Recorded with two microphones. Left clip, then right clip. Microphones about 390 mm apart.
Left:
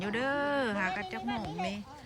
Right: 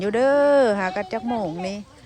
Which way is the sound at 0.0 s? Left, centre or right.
Centre.